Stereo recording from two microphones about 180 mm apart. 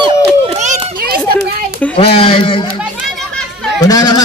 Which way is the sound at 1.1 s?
60° right (ahead or behind).